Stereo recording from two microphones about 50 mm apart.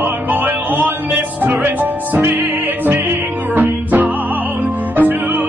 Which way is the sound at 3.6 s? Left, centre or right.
Right.